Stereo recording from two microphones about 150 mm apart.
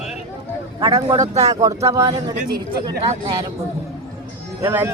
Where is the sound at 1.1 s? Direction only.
45° right (ahead or behind).